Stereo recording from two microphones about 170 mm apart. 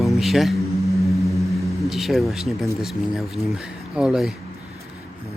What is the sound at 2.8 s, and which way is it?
Speech, centre (ahead or behind).